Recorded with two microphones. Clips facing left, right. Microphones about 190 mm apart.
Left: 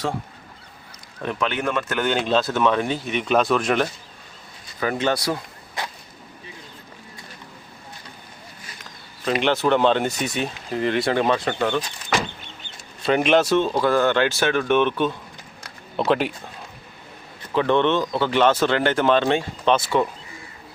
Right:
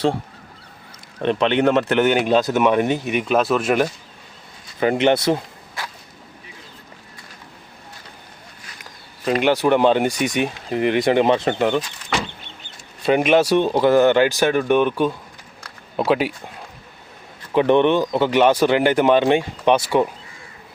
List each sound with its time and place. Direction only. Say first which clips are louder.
1.2 s speech: right 8 dB; 25° right (ahead or behind)
2.0 s speech: right 4 dB; 15° right (ahead or behind)
4.8 s speech: right 6 dB; 20° right (ahead or behind)
9.4 s speech: right 3 dB; 10° right (ahead or behind)
13.1 s speech: right 2 dB; 10° right (ahead or behind)
17.5 s speech: right 4 dB; 15° right (ahead or behind)